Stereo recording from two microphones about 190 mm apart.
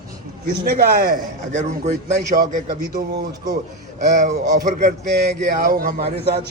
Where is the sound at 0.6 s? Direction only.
55° right (ahead or behind).